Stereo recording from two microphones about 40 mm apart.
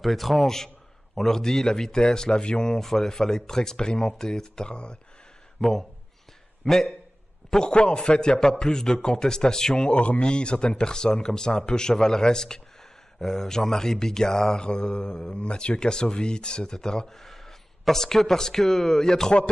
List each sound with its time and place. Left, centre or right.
0.0 s a man's voice: centre; by 4.9 s left
5.6 s a man's voice: centre
7.5 s a man's voice: left